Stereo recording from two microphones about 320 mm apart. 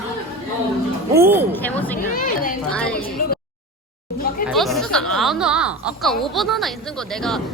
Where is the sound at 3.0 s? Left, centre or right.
Left.